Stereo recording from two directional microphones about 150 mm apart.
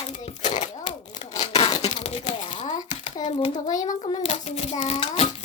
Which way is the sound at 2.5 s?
55° left (ahead or behind).